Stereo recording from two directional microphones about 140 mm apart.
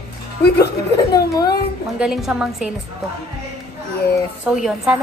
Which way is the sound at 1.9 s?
5° right (ahead or behind).